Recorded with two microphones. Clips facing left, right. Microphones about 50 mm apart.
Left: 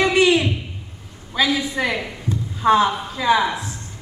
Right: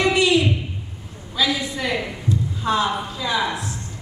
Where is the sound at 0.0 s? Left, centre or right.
Left.